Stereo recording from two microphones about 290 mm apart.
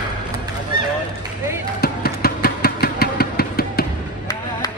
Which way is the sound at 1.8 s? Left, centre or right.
Left.